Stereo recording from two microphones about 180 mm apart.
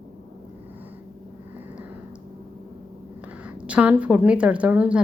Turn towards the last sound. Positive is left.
turn(degrees=-5)  # may be behind; listen again after turning